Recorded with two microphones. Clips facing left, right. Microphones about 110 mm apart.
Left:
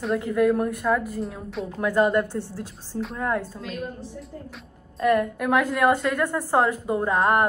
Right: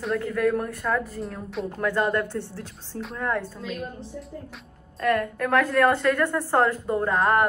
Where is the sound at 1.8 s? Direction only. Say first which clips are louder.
Left 4 dB; 10° left (ahead or behind).